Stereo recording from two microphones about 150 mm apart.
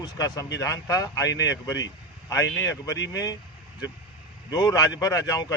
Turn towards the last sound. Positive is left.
turn(degrees=25)  # may be behind; listen again after turning